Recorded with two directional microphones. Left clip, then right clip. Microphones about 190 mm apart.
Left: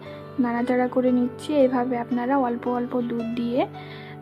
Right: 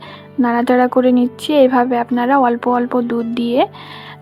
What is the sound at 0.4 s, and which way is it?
A woman's voice, 20° right (ahead or behind).